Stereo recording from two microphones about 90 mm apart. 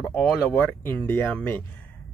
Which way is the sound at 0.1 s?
15° left (ahead or behind).